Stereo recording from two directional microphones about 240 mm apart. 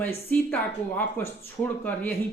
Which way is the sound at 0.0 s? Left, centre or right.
Centre.